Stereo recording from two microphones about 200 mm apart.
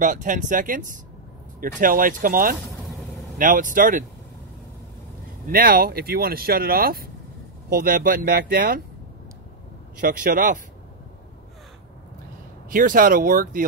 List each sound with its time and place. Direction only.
0.0 s speech: 40° right (ahead or behind)
5.5 s speech: 45° right (ahead or behind)
9.9 s speech: 45° right (ahead or behind)
12.6 s speech: 45° right (ahead or behind)